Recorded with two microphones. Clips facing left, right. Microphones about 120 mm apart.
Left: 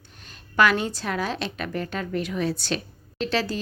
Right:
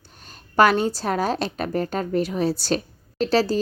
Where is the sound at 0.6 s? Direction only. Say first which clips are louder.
Right 4 dB; 40° right (ahead or behind).